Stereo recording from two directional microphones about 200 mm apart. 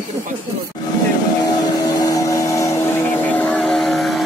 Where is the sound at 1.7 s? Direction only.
20° left (ahead or behind).